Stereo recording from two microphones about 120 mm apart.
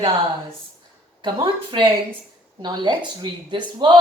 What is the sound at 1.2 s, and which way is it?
Speech, 45° right (ahead or behind).